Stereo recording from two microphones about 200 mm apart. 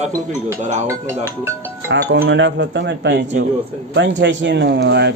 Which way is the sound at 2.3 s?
60° right (ahead or behind).